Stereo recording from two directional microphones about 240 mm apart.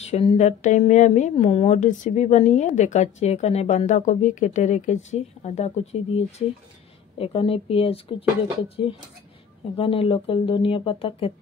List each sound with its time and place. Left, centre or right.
0.0 s speech: left